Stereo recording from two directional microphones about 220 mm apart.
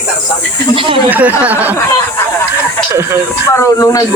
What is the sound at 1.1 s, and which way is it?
Speech, 10° right (ahead or behind).